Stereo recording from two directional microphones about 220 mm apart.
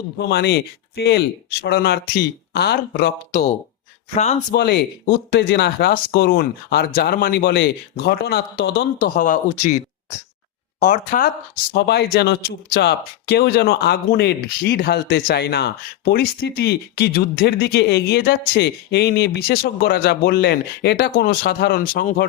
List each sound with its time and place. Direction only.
0.2 s speech: 50° left (ahead or behind)
4.1 s speech: 30° left (ahead or behind)
4.5 s speech: 50° left (ahead or behind)
11.7 s speech: 50° left (ahead or behind)